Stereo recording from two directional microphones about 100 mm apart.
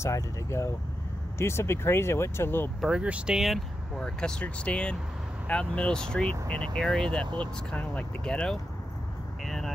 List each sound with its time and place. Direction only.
0.0 s speech: 30° left (ahead or behind)
2.8 s speech: 10° right (ahead or behind); by 8.5 s 5° left (ahead or behind)
9.4 s vehicle: 5° left (ahead or behind)